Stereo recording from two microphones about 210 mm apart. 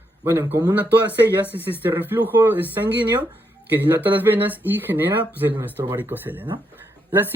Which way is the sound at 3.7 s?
10° right (ahead or behind).